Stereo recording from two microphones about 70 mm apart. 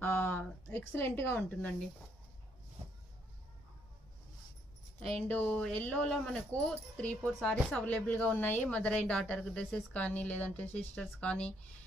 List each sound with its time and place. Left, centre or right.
0.0 s a sound: left
0.7 s a woman's voice: left
5.3 s speech: left
7.3 s speech: centre
7.8 s speech: centre